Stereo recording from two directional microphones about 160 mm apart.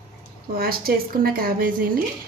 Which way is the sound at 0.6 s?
70° right (ahead or behind).